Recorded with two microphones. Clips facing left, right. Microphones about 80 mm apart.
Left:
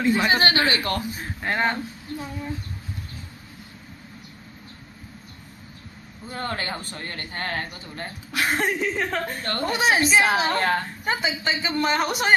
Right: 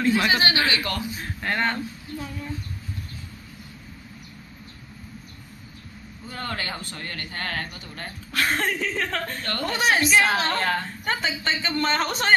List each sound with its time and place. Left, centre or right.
0.0 s a woman's voice: centre
0.3 s speech: left
1.4 s a man's voice: centre
6.2 s a man's voice: left
8.3 s a woman's voice: centre
9.4 s a man's voice: left